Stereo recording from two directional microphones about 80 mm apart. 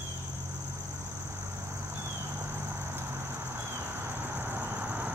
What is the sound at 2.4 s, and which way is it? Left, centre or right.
Vehicle, right.